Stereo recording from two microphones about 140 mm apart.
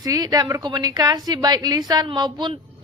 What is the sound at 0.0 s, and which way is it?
A woman's voice, 25° right (ahead or behind).